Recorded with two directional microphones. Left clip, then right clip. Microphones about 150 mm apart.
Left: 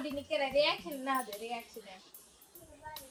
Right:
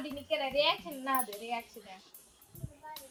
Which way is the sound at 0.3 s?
90° right.